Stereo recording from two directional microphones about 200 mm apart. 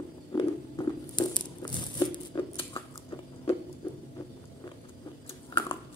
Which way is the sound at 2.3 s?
25° left (ahead or behind).